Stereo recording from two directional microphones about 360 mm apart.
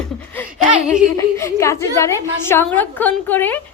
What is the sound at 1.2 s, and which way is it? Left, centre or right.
A woman's voice, centre.